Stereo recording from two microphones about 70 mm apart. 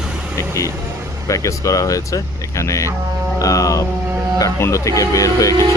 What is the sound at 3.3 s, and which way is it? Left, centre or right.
Music, left.